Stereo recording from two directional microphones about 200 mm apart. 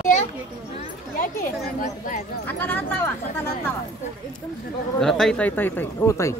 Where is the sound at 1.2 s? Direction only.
45° left (ahead or behind).